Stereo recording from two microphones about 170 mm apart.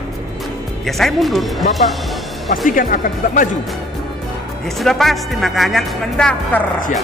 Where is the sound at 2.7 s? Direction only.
55° left (ahead or behind).